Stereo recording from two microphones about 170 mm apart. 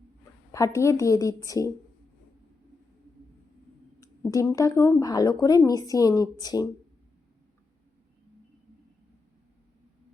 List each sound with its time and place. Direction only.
0.5 s speech: 15° left (ahead or behind)
4.0 s speech: 20° left (ahead or behind)